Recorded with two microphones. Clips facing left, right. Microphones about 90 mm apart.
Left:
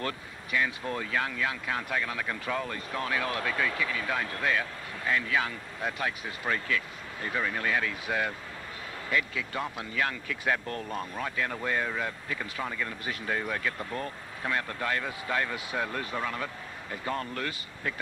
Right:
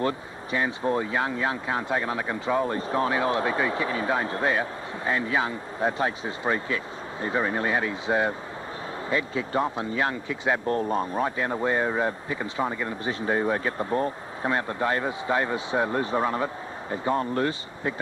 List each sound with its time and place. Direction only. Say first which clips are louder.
0.0 s speech: right 8 dB; 30° right (ahead or behind)